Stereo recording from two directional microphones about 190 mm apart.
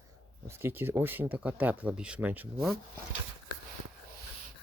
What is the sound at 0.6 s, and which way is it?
Speech, 10° right (ahead or behind).